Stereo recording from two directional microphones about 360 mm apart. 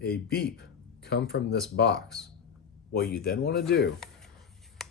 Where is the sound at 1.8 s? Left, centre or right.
Left.